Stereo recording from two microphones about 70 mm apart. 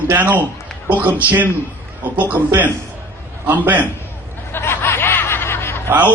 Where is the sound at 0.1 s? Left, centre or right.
Right.